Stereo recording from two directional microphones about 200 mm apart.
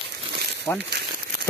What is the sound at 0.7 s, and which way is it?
Speech, 10° left (ahead or behind).